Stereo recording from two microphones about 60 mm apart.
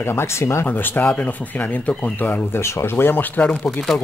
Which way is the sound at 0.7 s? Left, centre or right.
Left.